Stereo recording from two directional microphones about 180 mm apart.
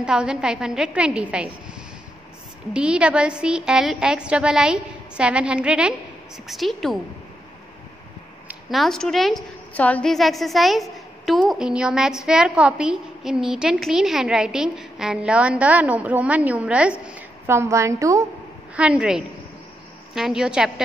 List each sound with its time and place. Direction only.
0.0 s a woman's voice: 5° right (ahead or behind)
2.7 s a woman's voice: 5° right (ahead or behind)
8.5 s a woman's voice: centre (ahead or behind); by 18.2 s 15° right (ahead or behind)
18.8 s a woman's voice: 5° right (ahead or behind)